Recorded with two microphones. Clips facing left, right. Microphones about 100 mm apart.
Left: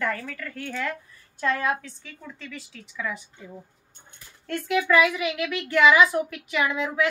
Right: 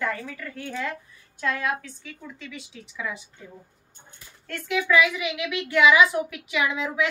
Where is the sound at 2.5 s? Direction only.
15° right (ahead or behind).